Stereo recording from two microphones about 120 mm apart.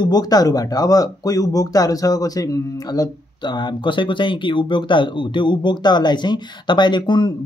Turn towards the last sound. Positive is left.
turn(degrees=40)  # may be behind; listen again after turning